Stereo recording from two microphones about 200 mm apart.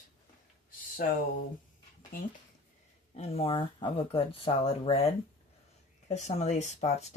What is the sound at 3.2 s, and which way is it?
Speech, 25° left (ahead or behind).